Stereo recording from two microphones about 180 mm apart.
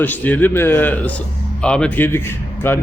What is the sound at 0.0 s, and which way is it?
A man's voice, 10° left (ahead or behind).